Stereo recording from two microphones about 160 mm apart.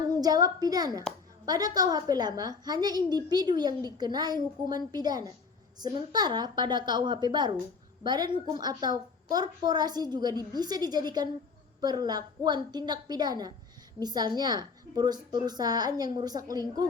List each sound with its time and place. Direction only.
0.1 s a woman's voice: 25° right (ahead or behind)